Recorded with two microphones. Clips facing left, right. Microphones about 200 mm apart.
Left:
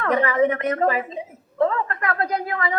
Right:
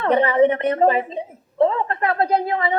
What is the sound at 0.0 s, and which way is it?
A woman's voice, 30° right (ahead or behind).